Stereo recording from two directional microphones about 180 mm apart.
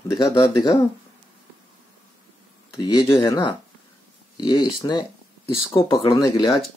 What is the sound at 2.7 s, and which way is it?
Speech, 25° left (ahead or behind).